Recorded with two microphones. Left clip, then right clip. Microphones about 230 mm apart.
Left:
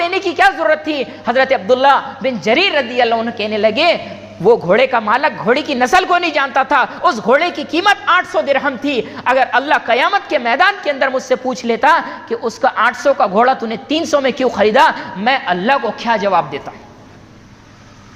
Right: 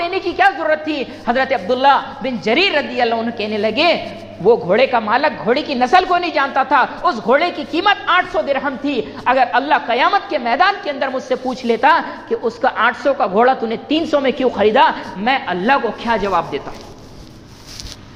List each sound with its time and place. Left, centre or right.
0.0 s a woman's voice: left